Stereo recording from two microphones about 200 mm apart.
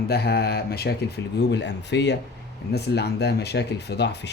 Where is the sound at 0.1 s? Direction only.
55° left (ahead or behind).